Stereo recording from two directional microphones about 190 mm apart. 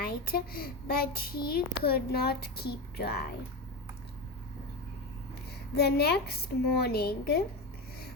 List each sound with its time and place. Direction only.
0.0 s a child's voice: 50° left (ahead or behind)
5.7 s a woman's voice: 55° left (ahead or behind)